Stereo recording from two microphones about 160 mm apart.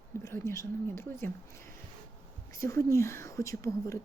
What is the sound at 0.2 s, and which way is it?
Speech, 15° left (ahead or behind).